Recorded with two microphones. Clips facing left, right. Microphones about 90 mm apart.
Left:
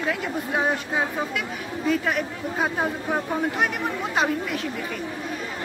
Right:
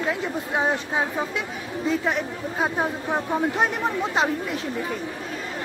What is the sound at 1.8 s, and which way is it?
Speech, 25° right (ahead or behind).